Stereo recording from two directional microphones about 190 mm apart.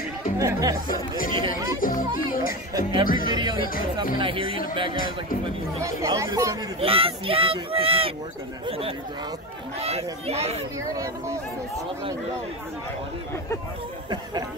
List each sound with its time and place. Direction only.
0.4 s speech: 15° right (ahead or behind)
1.8 s speech: 45° left (ahead or behind)
2.7 s speech: 25° right (ahead or behind)
5.8 s speech: 15° right (ahead or behind)
6.8 s speech: 30° right (ahead or behind)
10.9 s speech: 15° right (ahead or behind)